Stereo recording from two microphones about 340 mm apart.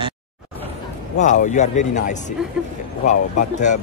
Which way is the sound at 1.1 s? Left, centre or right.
Left.